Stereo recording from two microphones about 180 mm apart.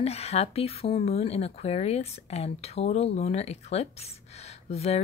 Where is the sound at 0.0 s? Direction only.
35° left (ahead or behind).